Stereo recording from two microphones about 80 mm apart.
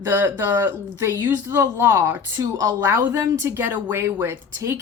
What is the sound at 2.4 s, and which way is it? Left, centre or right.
Speech, right.